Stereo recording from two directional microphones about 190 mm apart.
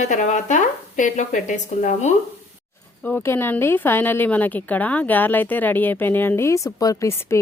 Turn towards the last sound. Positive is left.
turn(degrees=15)  # may be behind; listen again after turning